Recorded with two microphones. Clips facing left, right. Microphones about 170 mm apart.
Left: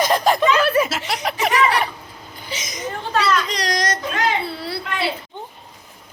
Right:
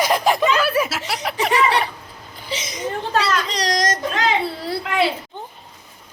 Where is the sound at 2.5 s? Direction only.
30° right (ahead or behind).